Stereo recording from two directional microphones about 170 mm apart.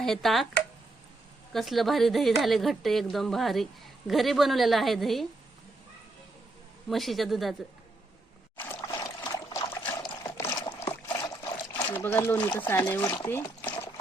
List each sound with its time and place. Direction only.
0.0 s a woman's voice: centre (ahead or behind)
1.5 s a woman's voice: centre (ahead or behind)
6.9 s a woman's voice: centre (ahead or behind)
8.5 s a sound: 10° left (ahead or behind)
8.9 s trickle: 20° left (ahead or behind)
11.7 s speech: 10° left (ahead or behind)